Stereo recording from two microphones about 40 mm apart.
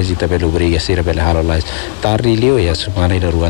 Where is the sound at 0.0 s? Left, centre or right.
Centre.